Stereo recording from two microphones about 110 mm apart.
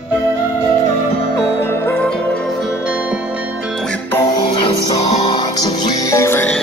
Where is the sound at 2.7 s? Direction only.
10° right (ahead or behind).